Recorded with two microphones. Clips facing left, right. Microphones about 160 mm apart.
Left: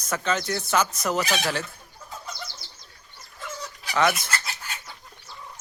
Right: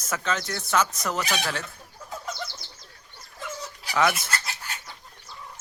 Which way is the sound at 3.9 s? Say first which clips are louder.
Left 1 dB; 5° right (ahead or behind).